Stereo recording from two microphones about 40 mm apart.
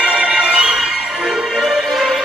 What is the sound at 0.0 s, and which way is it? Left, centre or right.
Music, right.